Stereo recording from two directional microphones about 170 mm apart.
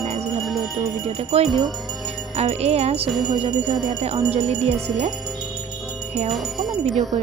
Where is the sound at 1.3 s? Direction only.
35° right (ahead or behind).